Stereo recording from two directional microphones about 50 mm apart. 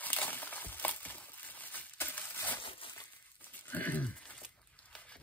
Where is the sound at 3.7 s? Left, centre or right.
Left.